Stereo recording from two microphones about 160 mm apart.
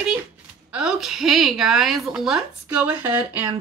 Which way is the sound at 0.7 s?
5° right (ahead or behind).